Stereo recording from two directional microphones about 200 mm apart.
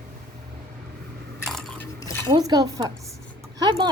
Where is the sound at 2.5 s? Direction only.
20° right (ahead or behind).